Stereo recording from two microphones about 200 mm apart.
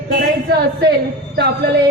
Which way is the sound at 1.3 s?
55° right (ahead or behind).